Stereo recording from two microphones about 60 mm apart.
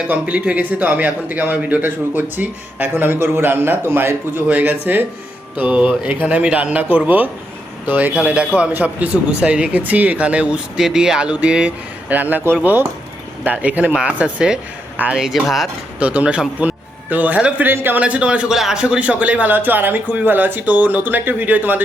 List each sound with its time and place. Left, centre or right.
0.1 s speech: right
2.9 s a man's voice: right
4.4 s speech: right
10.8 s a man's voice: centre
15.4 s speech: centre
16.0 s a man's voice: right
17.7 s a man's voice: right
18.0 s speech: centre